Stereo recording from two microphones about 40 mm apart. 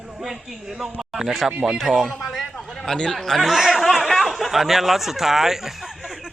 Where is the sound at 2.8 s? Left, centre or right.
Centre.